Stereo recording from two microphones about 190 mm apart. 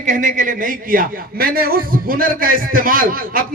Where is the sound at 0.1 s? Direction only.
45° right (ahead or behind).